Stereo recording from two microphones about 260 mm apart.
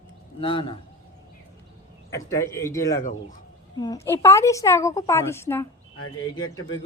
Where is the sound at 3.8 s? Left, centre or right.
Centre.